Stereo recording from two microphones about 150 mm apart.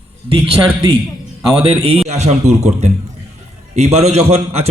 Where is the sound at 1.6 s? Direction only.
40° right (ahead or behind).